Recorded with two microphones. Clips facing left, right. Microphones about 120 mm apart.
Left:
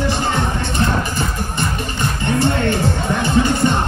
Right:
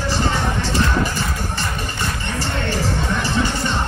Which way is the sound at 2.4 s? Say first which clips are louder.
Left 5 dB; 55° left (ahead or behind).